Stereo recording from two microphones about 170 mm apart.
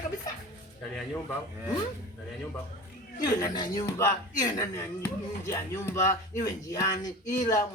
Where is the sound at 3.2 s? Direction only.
20° left (ahead or behind).